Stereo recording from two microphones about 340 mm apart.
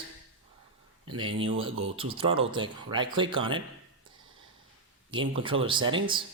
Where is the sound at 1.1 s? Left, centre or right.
Centre.